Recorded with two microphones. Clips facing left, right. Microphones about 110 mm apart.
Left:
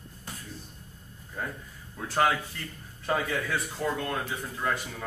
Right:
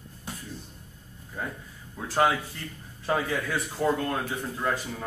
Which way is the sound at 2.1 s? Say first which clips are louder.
Right 2 dB; 5° right (ahead or behind).